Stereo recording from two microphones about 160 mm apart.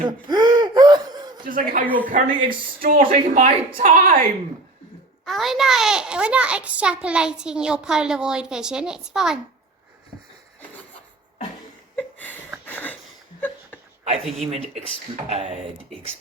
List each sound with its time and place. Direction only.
0.3 s gasp: 25° right (ahead or behind)
1.5 s speech: 60° right (ahead or behind)
5.2 s a child's voice: centre (ahead or behind)
11.9 s a sound: 10° left (ahead or behind)
14.1 s speech: 40° right (ahead or behind)